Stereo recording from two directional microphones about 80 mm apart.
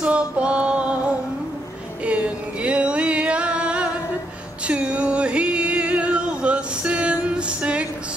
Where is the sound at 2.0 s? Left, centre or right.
Centre.